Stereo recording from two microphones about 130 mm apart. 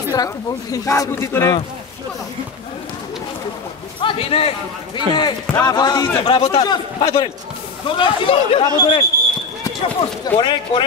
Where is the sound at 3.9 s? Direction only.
45° left (ahead or behind).